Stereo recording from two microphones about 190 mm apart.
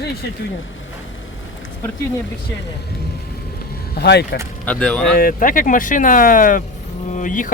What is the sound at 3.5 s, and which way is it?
Vehicle, 55° left (ahead or behind).